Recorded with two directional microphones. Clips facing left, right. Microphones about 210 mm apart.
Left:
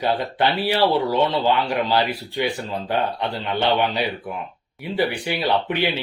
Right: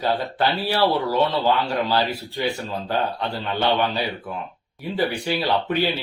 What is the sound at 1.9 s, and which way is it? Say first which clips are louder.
Speech: left 1 dB; 15° left (ahead or behind).